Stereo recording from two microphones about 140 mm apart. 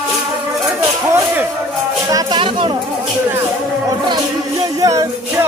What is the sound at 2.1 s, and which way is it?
Music, 25° right (ahead or behind).